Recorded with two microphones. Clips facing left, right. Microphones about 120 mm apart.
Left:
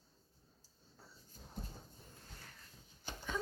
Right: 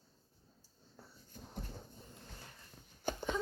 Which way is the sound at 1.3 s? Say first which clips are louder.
Right 6 dB; 65° right (ahead or behind).